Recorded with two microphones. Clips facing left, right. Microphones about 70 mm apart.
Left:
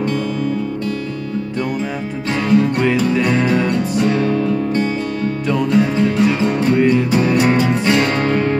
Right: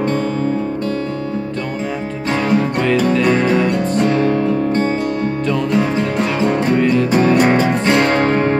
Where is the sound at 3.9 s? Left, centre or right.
Right.